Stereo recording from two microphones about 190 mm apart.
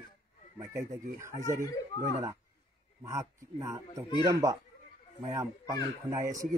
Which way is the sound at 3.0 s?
15° right (ahead or behind).